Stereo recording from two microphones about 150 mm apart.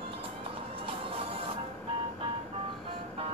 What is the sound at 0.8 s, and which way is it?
Music, 35° right (ahead or behind).